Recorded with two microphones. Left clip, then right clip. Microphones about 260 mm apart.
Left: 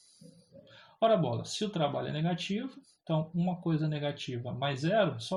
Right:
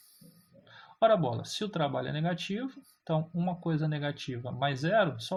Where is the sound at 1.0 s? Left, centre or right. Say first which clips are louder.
Right 2 dB; right.